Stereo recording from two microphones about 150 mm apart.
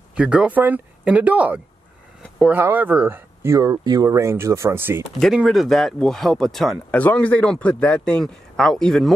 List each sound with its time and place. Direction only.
0.1 s speech: 10° right (ahead or behind)
2.2 s a sound: 5° left (ahead or behind)
2.5 s speech: 10° right (ahead or behind)
5.2 s speech: centre (ahead or behind)